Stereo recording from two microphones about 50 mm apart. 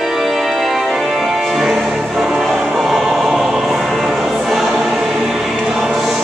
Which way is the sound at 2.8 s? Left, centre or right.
Centre.